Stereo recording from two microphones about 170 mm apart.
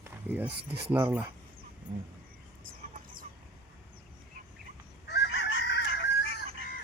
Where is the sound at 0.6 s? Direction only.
75° right (ahead or behind).